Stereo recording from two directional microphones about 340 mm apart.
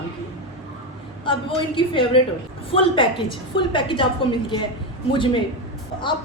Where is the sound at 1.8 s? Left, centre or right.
Centre.